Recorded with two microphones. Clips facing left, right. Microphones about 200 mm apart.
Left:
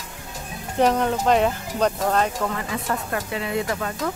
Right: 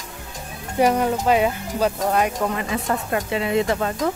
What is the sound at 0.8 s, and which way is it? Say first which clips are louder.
Speech: right 1 dB; 10° right (ahead or behind).